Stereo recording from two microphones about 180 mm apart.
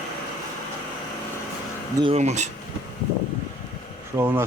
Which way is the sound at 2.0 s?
35° right (ahead or behind).